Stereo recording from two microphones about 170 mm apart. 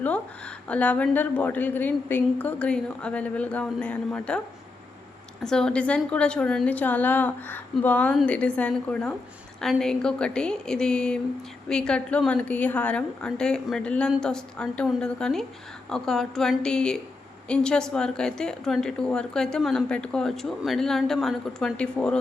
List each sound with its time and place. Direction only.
0.7 s a woman's voice: 10° left (ahead or behind)
5.4 s a woman's voice: 5° left (ahead or behind)